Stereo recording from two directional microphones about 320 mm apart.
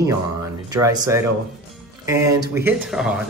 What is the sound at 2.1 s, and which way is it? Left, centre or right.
Speech, centre.